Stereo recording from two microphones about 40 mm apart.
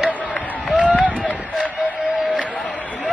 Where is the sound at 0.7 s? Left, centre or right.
Right.